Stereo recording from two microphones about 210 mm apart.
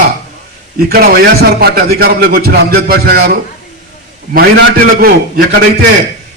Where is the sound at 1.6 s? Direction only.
50° right (ahead or behind).